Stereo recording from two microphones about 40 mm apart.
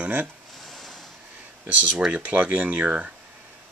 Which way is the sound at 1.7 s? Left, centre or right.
Right.